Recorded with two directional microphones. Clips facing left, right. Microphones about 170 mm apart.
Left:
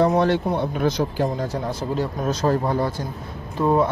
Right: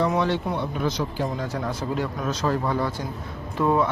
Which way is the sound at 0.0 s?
45° left (ahead or behind).